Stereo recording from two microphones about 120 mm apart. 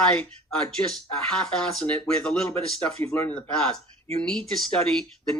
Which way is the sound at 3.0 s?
20° left (ahead or behind).